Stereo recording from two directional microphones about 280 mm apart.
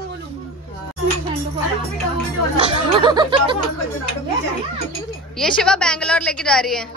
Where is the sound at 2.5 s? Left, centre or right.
Centre.